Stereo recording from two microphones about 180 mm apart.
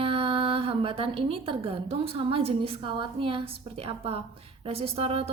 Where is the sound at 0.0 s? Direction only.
30° right (ahead or behind).